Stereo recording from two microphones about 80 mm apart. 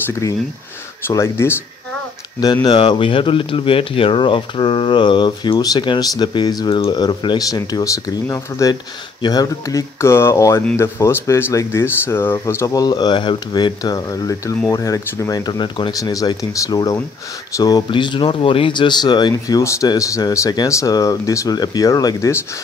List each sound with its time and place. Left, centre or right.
1.0 s speech: left
2.4 s speech: left
5.8 s speech: left
6.7 s speech: left
7.3 s speech: left
9.2 s speech: left
12.7 s speech: left
15.9 s speech: left
17.9 s speech: left